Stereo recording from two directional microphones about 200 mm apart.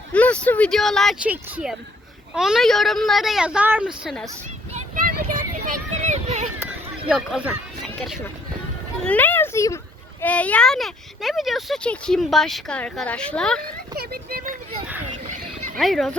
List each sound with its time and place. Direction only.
0.1 s speech: 5° left (ahead or behind)
4.7 s a sound: 40° right (ahead or behind)
7.1 s speech: 5° right (ahead or behind)
13.9 s speech: 50° right (ahead or behind)
15.8 s speech: centre (ahead or behind)